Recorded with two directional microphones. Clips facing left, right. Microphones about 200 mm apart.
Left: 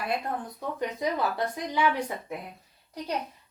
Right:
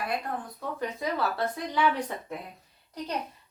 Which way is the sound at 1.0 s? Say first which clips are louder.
Left 1 dB; 20° left (ahead or behind).